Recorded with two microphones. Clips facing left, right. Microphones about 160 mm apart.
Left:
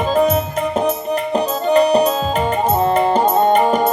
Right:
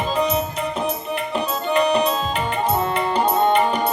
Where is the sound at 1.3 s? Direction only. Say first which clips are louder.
Left 6 dB; 40° left (ahead or behind).